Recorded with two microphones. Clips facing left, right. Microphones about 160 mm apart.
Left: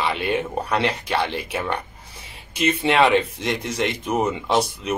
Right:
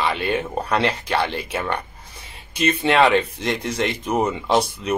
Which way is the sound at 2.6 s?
5° left (ahead or behind).